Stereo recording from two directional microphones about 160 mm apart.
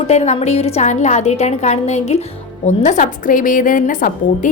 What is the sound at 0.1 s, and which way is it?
A woman's voice, 45° left (ahead or behind).